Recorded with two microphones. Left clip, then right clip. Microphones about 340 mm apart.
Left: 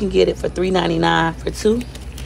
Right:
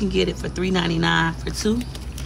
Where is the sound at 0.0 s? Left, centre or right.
Centre.